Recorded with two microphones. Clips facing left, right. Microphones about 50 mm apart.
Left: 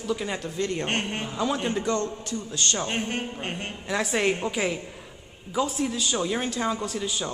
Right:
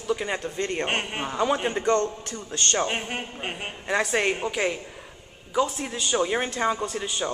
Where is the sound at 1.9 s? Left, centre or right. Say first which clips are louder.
Right 4 dB; right.